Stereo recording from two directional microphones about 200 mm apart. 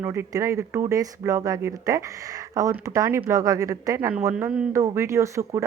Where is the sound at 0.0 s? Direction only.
15° right (ahead or behind).